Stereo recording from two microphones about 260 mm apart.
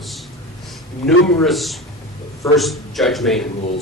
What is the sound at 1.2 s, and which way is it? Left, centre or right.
Speech, centre.